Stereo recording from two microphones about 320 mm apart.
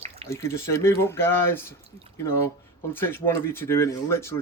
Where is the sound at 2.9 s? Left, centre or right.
Centre.